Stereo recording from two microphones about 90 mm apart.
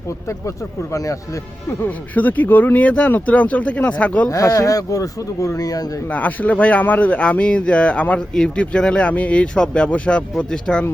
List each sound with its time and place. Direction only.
0.3 s speech: 35° left (ahead or behind)
2.1 s a man's voice: 20° left (ahead or behind)
4.3 s speech: 40° left (ahead or behind)
6.1 s a man's voice: 15° left (ahead or behind)